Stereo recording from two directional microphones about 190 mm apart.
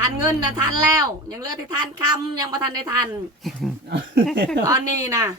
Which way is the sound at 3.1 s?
Centre (ahead or behind).